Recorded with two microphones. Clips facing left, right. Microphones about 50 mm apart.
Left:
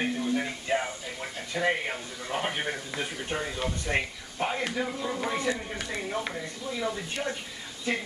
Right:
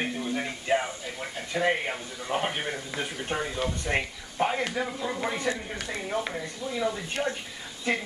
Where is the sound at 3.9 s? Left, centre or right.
Right.